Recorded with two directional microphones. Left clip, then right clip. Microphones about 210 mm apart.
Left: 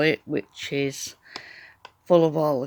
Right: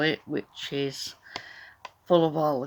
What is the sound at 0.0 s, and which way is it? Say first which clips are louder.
Speech: left 4 dB; 35° left (ahead or behind).